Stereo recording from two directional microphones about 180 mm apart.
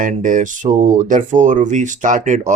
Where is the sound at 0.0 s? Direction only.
45° right (ahead or behind).